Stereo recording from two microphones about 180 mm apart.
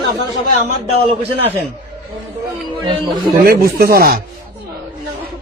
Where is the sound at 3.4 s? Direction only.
55° right (ahead or behind).